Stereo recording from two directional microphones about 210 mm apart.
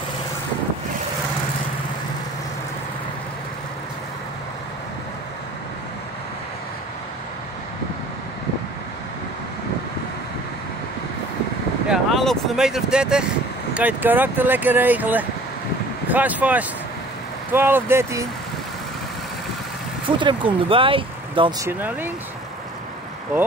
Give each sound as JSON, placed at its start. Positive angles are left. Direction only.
{"t": 11.9, "sound": "speech", "side_deg": 0}
{"t": 20.1, "sound": "speech", "side_deg": -25}